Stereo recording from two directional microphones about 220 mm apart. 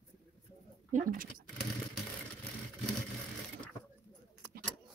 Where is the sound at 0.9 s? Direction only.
35° right (ahead or behind).